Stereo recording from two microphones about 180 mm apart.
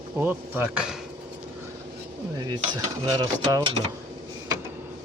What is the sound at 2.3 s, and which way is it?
Mechanisms, 25° right (ahead or behind).